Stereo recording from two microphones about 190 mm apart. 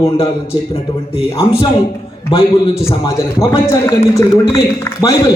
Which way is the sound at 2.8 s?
20° left (ahead or behind).